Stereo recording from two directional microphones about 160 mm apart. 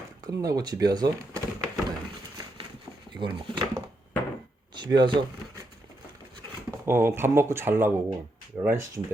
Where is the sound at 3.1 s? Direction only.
30° right (ahead or behind).